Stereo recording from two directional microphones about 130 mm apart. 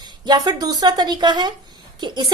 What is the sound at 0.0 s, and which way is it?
A woman's voice, 30° right (ahead or behind).